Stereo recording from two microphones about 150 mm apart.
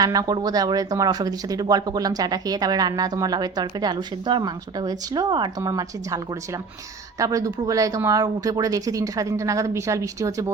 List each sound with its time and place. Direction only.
0.0 s speech: 25° right (ahead or behind)
7.2 s speech: 20° right (ahead or behind)